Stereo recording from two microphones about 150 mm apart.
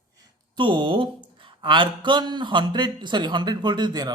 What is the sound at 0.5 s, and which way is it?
Speech, 30° right (ahead or behind).